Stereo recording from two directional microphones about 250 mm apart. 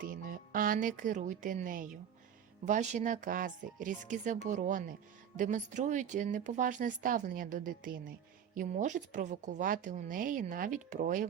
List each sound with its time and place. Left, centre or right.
0.0 s a woman's voice: right